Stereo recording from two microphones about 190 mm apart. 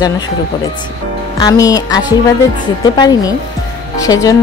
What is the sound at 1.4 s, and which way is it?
A woman's voice, 20° left (ahead or behind).